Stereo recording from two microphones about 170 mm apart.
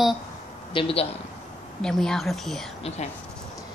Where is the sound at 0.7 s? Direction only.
30° left (ahead or behind).